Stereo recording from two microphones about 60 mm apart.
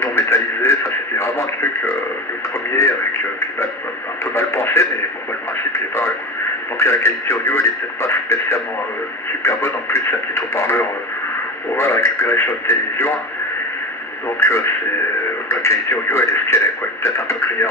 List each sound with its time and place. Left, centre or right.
0.0 s radio: left
6.8 s radio: left
14.4 s radio: left